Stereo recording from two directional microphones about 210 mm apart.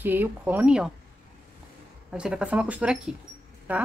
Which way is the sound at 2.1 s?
5° right (ahead or behind).